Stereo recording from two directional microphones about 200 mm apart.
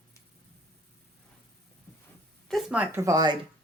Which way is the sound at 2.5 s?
5° right (ahead or behind).